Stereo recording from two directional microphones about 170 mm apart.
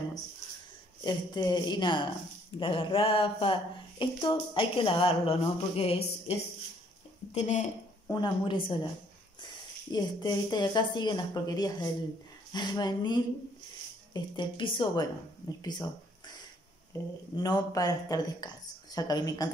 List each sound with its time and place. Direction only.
1.0 s speech: 25° left (ahead or behind)
7.3 s speech: 45° left (ahead or behind)
8.1 s speech: 25° left (ahead or behind)
9.9 s speech: 25° left (ahead or behind)
16.9 s speech: 20° left (ahead or behind)